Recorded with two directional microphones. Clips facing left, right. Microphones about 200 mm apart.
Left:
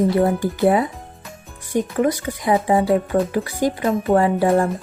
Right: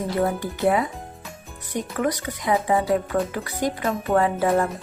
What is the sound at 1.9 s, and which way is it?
Speech, 30° left (ahead or behind).